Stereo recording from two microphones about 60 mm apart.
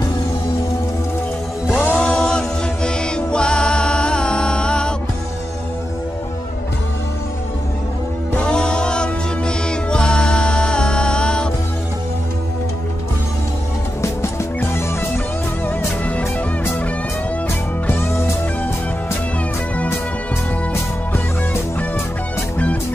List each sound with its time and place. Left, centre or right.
1.7 s music: left
2.0 s music: centre
8.4 s music: centre
17.8 s music: left